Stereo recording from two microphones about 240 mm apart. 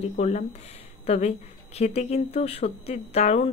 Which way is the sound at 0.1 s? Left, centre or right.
Left.